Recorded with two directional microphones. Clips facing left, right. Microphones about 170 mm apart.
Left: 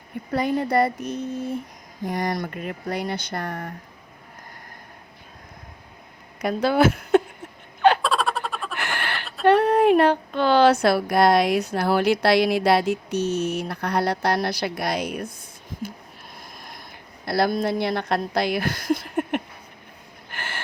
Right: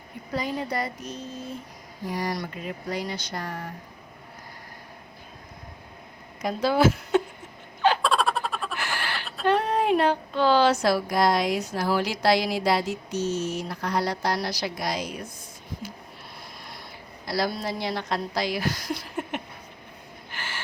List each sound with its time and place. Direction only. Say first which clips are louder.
0.3 s speech: left 8 dB; 60° left (ahead or behind)
6.4 s speech: left 2 dB; 60° left (ahead or behind)
8.0 s a sound: even; centre (ahead or behind)
8.7 s a sound: left 2 dB; 60° left (ahead or behind)
9.4 s speech: left 7 dB; 60° left (ahead or behind)
17.2 s speech: left 6 dB; 60° left (ahead or behind)
20.3 s gasp: left 3 dB; 55° left (ahead or behind)